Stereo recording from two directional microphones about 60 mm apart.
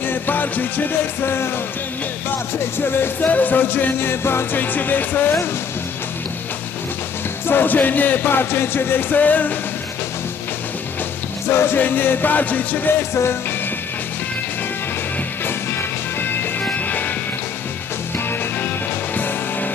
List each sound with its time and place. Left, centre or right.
0.0 s music: left
2.7 s music: left
7.4 s music: left
11.4 s music: left
13.0 s music: left
16.2 s music: left